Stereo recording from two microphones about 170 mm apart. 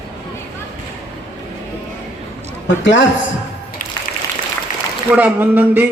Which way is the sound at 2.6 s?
90° left.